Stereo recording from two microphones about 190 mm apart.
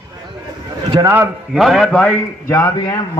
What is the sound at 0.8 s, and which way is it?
Speech, 15° right (ahead or behind).